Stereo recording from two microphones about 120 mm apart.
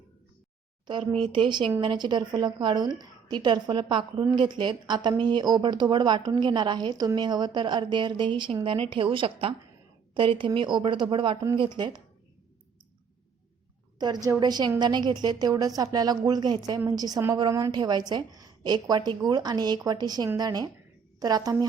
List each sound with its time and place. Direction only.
0.9 s speech: 40° right (ahead or behind)
14.3 s speech: 35° right (ahead or behind)